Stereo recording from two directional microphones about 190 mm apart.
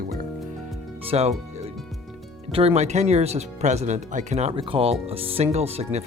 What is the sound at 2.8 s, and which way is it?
Speech, 35° right (ahead or behind).